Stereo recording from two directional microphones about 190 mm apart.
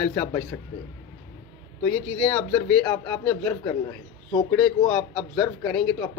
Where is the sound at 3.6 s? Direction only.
20° left (ahead or behind).